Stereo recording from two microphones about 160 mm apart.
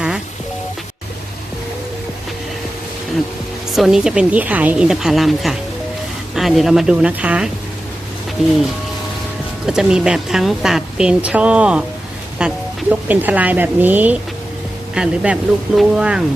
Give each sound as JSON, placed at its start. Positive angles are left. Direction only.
{"t": 3.8, "sound": "speech", "side_deg": 0}
{"t": 9.6, "sound": "a woman's voice", "side_deg": -5}